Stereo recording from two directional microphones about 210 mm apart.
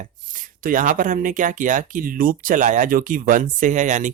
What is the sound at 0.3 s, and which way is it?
Speech, 40° right (ahead or behind).